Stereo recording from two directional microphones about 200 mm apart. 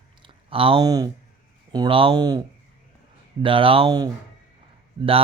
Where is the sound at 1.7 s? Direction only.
25° right (ahead or behind).